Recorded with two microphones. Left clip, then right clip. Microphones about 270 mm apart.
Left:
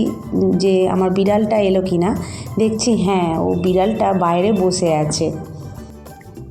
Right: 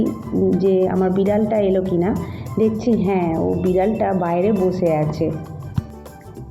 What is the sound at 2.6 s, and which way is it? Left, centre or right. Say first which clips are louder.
Speech: left 1 dB; centre.